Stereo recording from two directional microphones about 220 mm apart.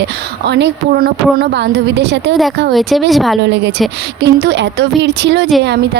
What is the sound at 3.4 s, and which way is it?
Speech, 50° right (ahead or behind).